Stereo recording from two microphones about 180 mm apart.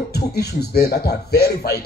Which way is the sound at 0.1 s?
65° left (ahead or behind).